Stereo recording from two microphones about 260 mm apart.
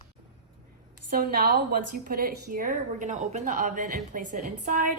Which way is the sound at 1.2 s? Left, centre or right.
Right.